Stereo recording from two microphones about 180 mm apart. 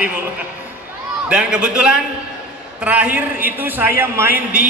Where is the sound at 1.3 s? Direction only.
5° right (ahead or behind).